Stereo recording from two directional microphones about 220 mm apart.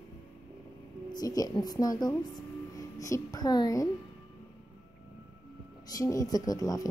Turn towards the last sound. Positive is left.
turn(degrees=15)  # may be behind; listen again after turning